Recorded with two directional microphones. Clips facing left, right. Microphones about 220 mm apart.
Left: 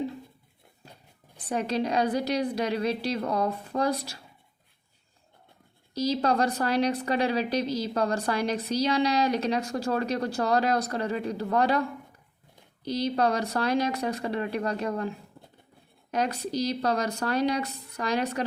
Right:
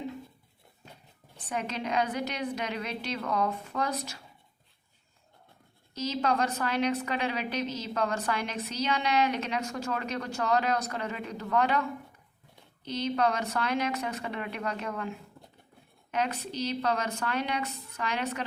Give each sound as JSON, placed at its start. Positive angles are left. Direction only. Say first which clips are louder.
{"t": 1.5, "sound": "a woman's voice", "louder": "left 6 dB", "side_deg": 35}
{"t": 5.9, "sound": "a woman's voice", "louder": "left 4 dB", "side_deg": 35}
{"t": 16.1, "sound": "a woman's voice", "louder": "left 4 dB", "side_deg": 35}